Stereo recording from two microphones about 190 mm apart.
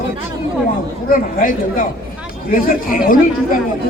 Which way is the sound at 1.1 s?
45° left (ahead or behind).